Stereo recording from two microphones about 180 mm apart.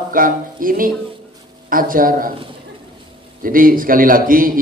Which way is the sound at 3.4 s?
50° right (ahead or behind).